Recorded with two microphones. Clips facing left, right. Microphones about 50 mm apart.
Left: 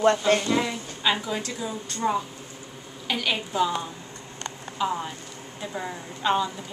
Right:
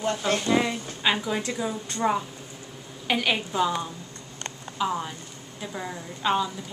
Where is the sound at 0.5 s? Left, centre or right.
Centre.